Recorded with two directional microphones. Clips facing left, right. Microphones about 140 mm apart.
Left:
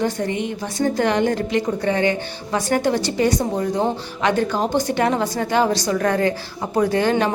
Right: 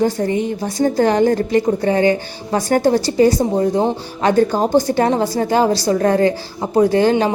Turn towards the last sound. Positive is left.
turn(degrees=-30)  # may be behind; listen again after turning